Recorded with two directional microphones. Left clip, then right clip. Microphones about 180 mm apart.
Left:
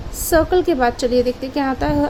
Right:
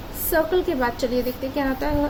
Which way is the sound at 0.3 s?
55° left (ahead or behind).